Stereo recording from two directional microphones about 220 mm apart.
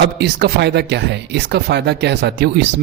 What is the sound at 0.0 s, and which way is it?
Speech, 50° right (ahead or behind).